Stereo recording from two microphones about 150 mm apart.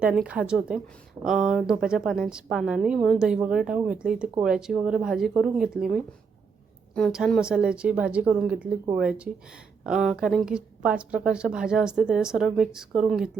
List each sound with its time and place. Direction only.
0.0 s a woman's voice: 5° right (ahead or behind)
7.1 s a woman's voice: centre (ahead or behind)